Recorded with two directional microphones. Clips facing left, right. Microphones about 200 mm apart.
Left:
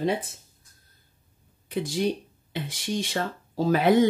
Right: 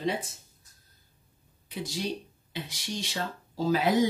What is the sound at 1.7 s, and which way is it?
A woman's voice, 55° left (ahead or behind).